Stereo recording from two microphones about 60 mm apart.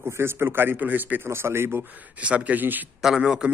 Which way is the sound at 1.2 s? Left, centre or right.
Right.